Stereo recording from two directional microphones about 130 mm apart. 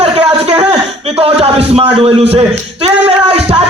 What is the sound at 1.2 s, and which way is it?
A man's voice, 45° right (ahead or behind).